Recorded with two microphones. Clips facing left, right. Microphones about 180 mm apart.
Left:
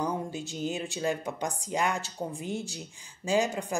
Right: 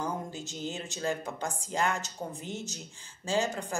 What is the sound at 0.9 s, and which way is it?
A woman's voice, 15° left (ahead or behind).